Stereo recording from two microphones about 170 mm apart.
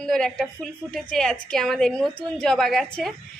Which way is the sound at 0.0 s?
Centre (ahead or behind).